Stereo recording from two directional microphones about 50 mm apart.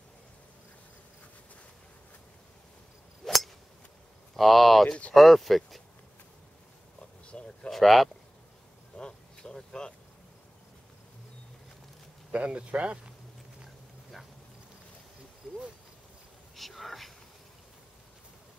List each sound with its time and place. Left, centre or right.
3.2 s scissors: centre
4.4 s speech: centre
7.2 s a sound: centre
7.7 s speech: centre
8.9 s vehicle: centre
12.3 s speech: right
16.5 s a sound: centre